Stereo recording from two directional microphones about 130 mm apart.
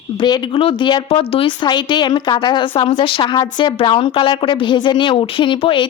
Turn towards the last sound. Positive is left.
turn(degrees=40)  # may be behind; listen again after turning